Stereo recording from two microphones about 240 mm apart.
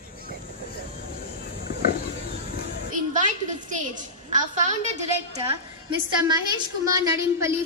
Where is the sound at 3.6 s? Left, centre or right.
Right.